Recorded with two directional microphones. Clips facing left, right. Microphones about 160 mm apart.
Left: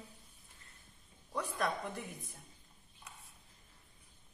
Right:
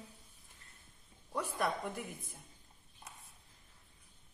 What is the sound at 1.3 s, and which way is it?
Speech, 5° right (ahead or behind).